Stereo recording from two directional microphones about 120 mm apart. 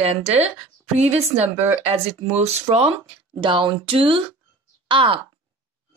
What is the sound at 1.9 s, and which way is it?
Speech, 60° right (ahead or behind).